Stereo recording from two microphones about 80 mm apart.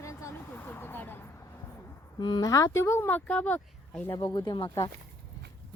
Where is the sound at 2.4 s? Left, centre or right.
Left.